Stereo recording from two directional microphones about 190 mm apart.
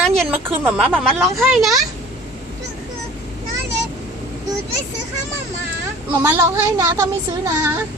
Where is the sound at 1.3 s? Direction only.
Centre (ahead or behind).